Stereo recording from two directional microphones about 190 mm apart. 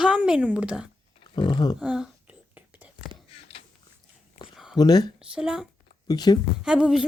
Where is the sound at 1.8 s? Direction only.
5° right (ahead or behind).